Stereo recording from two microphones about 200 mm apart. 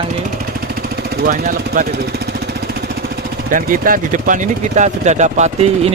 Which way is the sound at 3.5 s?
40° right (ahead or behind).